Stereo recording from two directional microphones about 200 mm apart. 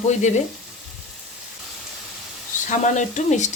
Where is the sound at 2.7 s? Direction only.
40° left (ahead or behind).